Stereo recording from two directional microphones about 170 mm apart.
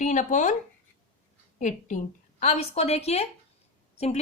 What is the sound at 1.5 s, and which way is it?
A woman's voice, 45° left (ahead or behind).